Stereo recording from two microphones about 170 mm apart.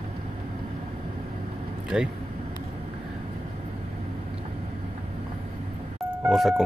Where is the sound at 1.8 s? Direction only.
5° right (ahead or behind).